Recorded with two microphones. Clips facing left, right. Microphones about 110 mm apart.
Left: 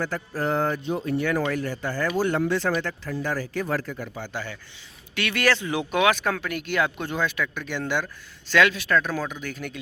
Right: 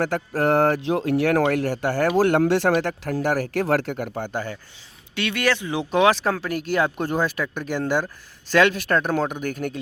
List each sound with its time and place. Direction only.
0.0 s speech: 75° right (ahead or behind); by 4.5 s 45° right (ahead or behind)
5.1 s speech: 20° right (ahead or behind)
5.9 s speech: 35° right (ahead or behind); by 9.7 s 50° right (ahead or behind)